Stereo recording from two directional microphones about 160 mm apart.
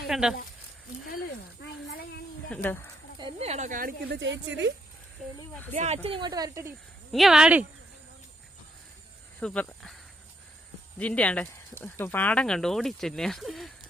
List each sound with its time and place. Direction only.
0.1 s speech: 5° right (ahead or behind)
1.6 s a sound: 85° left
2.5 s speech: 10° left (ahead or behind)
3.2 s speech: 35° right (ahead or behind); by 4.7 s 90° right
5.7 s speech: 45° right (ahead or behind); by 6.7 s 20° right (ahead or behind)
7.1 s speech: centre (ahead or behind)
9.4 s speech: 5° left (ahead or behind)